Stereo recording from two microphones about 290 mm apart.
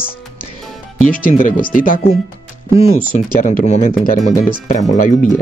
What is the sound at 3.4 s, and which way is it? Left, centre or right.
Speech, left.